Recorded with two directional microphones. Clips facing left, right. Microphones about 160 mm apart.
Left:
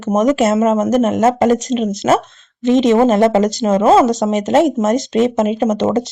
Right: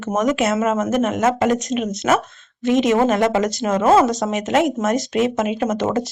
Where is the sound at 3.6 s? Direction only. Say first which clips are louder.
Left 3 dB; 20° left (ahead or behind).